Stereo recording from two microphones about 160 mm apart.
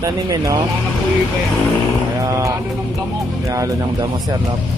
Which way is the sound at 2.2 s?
20° right (ahead or behind).